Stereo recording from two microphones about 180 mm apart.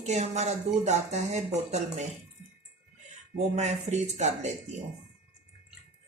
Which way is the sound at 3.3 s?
40° right (ahead or behind).